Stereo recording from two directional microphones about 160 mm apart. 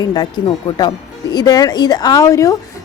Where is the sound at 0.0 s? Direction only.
25° left (ahead or behind).